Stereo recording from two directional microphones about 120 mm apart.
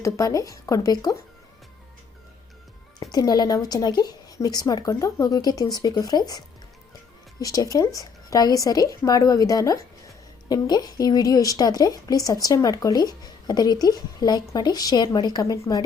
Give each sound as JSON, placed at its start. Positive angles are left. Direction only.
{"t": 0.0, "sound": "speech", "side_deg": 25}
{"t": 3.0, "sound": "speech", "side_deg": 35}